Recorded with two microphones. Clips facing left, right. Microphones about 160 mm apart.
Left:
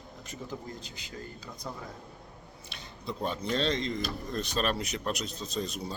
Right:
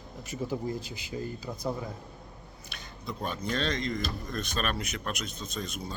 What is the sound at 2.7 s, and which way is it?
Speech, 30° left (ahead or behind).